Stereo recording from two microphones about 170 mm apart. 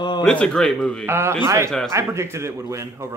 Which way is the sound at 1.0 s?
15° right (ahead or behind).